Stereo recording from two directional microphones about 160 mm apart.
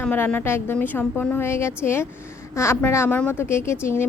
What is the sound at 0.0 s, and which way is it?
Speech, 10° left (ahead or behind).